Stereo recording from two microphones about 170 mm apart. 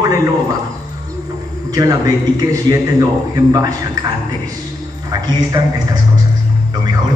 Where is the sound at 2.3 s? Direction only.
20° right (ahead or behind).